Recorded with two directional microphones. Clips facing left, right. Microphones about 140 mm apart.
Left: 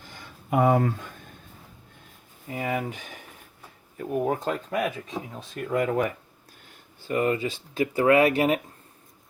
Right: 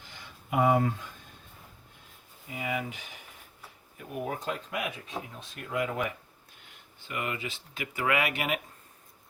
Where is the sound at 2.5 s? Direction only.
45° left (ahead or behind).